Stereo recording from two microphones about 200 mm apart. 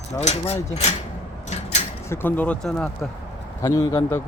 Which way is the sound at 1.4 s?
35° left (ahead or behind).